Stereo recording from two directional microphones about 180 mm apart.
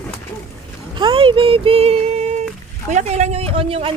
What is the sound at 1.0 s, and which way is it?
Speech, 30° right (ahead or behind).